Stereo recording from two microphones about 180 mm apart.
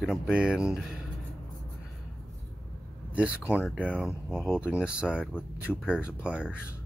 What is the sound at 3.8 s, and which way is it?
Speech, 5° right (ahead or behind).